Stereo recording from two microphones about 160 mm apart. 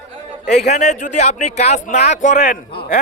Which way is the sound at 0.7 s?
45° left (ahead or behind).